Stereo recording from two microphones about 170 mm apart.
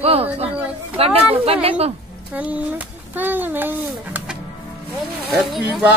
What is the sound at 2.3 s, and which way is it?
A child's voice, 10° right (ahead or behind).